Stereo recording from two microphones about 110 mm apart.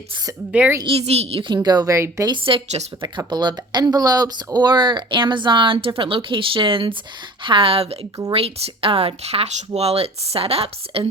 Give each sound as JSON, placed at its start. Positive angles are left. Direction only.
{"t": 0.5, "sound": "a woman's voice", "side_deg": -15}
{"t": 0.9, "sound": "a woman's voice", "side_deg": -70}
{"t": 1.6, "sound": "speech", "side_deg": -35}
{"t": 2.3, "sound": "speech", "side_deg": -55}
{"t": 3.0, "sound": "speech", "side_deg": -40}